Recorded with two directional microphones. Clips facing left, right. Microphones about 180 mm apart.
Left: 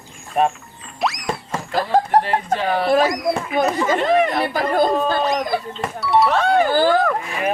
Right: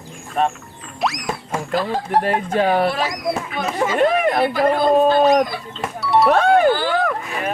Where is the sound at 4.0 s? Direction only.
50° right (ahead or behind).